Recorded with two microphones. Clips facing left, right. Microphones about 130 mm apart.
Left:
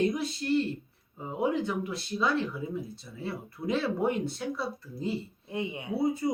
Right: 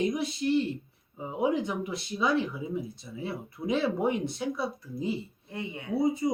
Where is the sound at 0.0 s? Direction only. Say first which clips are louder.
Even; 10° right (ahead or behind).